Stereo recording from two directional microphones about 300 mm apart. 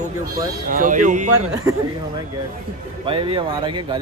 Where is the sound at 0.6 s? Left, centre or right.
Right.